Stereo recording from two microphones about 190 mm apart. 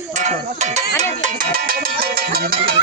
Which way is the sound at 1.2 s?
50° right (ahead or behind).